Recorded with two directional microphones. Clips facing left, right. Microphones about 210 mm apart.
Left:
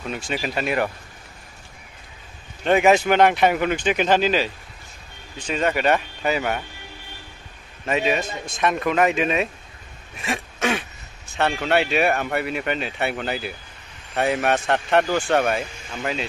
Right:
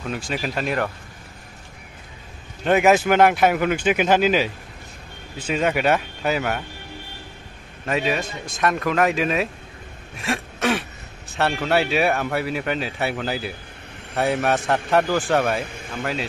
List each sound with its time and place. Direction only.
0.0 s speech: centre (ahead or behind)
2.6 s speech: 5° right (ahead or behind)
5.5 s speech: 5° right (ahead or behind)
7.8 s speech: centre (ahead or behind)
15.6 s speech: 55° right (ahead or behind)
16.0 s speech: centre (ahead or behind)